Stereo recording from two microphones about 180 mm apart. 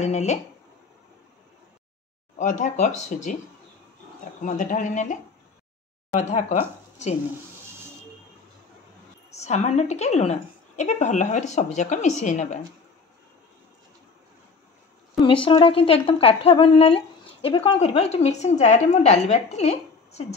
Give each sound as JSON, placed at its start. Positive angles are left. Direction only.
{"t": 0.0, "sound": "speech", "side_deg": 40}
{"t": 2.3, "sound": "speech", "side_deg": 40}
{"t": 4.4, "sound": "speech", "side_deg": 45}
{"t": 9.3, "sound": "speech", "side_deg": 40}
{"t": 15.2, "sound": "speech", "side_deg": 30}